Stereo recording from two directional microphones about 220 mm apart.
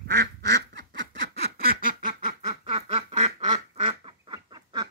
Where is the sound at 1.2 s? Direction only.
45° right (ahead or behind).